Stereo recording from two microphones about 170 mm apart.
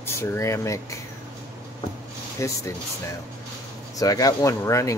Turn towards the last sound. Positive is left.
turn(degrees=20)  # may be behind; listen again after turning